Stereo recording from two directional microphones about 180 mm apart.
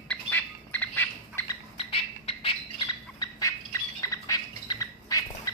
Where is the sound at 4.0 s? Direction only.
20° left (ahead or behind).